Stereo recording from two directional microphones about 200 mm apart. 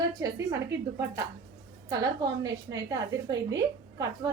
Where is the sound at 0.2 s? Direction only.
15° right (ahead or behind).